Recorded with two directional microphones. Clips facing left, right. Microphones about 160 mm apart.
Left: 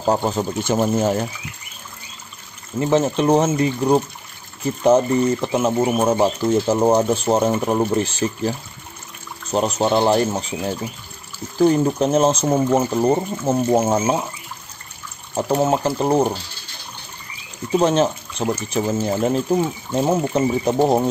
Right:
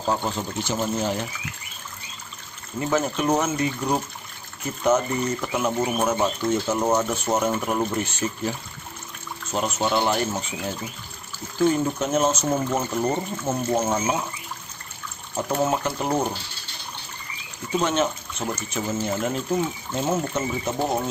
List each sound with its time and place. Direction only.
0.0 s speech: 40° left (ahead or behind)
2.8 s speech: 30° left (ahead or behind)
11.6 s speech: 35° left (ahead or behind)
15.3 s speech: 30° left (ahead or behind)
17.7 s speech: 35° left (ahead or behind)